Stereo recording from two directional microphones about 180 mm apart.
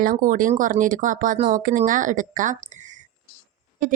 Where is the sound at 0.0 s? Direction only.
50° right (ahead or behind).